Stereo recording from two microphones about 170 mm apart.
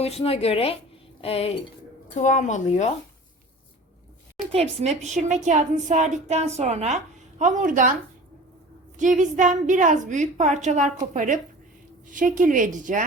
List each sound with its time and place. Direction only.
0.0 s speech: 35° left (ahead or behind)
2.1 s speech: 45° left (ahead or behind)
4.5 s a woman's voice: 40° right (ahead or behind)
9.0 s a woman's voice: 45° right (ahead or behind)